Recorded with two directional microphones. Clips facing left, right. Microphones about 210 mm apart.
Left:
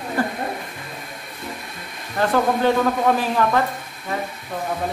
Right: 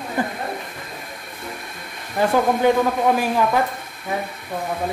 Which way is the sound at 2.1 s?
10° right (ahead or behind).